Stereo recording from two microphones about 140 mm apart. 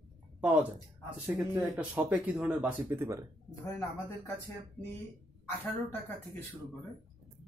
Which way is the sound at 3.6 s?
15° left (ahead or behind).